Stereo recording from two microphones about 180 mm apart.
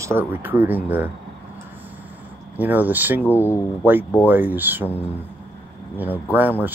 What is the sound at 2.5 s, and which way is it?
Speech, 10° right (ahead or behind).